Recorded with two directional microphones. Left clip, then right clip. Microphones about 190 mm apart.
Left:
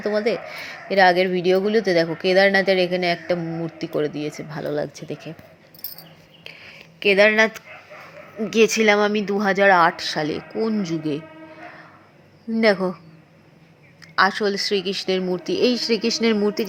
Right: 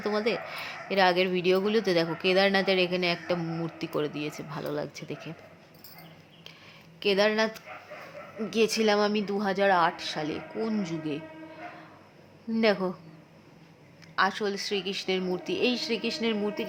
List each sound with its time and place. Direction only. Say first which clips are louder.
0.0 s speech: left 7 dB; 10° left (ahead or behind)
7.0 s speech: left 9 dB; 15° left (ahead or behind)
12.5 s speech: left 7 dB; 15° left (ahead or behind)
14.0 s speech: left 8 dB; 20° left (ahead or behind)
15.5 s speech: left 9 dB; 25° left (ahead or behind)